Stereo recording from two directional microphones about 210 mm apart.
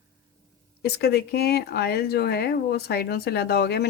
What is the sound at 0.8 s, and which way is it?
Speech, 50° left (ahead or behind).